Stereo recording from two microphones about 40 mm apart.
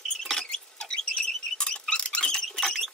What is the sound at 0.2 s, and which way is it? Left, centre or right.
Rodents, centre.